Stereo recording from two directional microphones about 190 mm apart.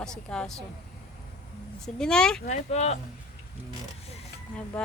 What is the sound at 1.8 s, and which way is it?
Speech, 5° left (ahead or behind).